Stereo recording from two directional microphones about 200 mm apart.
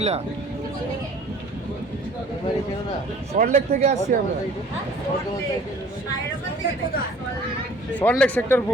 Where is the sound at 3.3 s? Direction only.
45° right (ahead or behind).